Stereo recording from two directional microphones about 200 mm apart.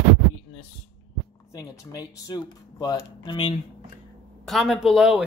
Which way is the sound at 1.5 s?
15° left (ahead or behind).